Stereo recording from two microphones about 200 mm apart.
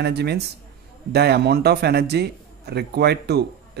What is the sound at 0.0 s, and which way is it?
Speech, 55° right (ahead or behind).